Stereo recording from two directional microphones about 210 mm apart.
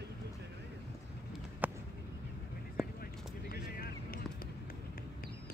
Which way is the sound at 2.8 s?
Centre (ahead or behind).